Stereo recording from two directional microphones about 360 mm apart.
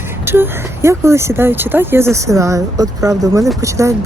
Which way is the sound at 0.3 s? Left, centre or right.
Centre.